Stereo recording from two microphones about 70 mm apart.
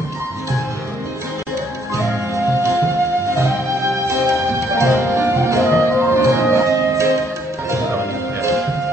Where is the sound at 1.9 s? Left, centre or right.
Left.